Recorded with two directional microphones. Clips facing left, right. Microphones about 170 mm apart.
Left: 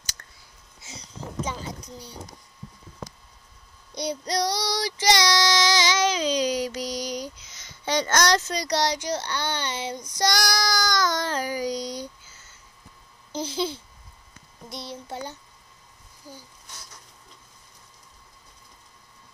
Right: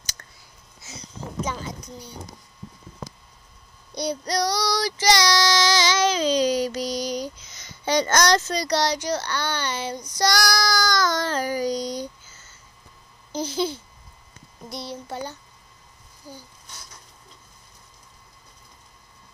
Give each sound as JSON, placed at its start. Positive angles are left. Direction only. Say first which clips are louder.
{"t": 0.2, "sound": "a sound", "louder": "right 2 dB", "side_deg": -25}
{"t": 1.4, "sound": "a sound", "louder": "right 2 dB", "side_deg": 30}
{"t": 3.9, "sound": "a child's voice", "louder": "right 2 dB", "side_deg": 20}
{"t": 5.0, "sound": "child singing", "louder": "right 1 dB", "side_deg": 20}
{"t": 7.5, "sound": "speech", "louder": "right 3 dB", "side_deg": 0}
{"t": 8.5, "sound": "a child's voice", "louder": "right 2 dB", "side_deg": 15}
{"t": 11.6, "sound": "speech", "louder": "right 3 dB", "side_deg": -45}
{"t": 13.4, "sound": "a child's voice", "louder": "right 2 dB", "side_deg": 25}